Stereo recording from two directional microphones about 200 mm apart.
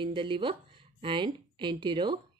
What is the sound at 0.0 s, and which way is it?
Speech, 25° right (ahead or behind).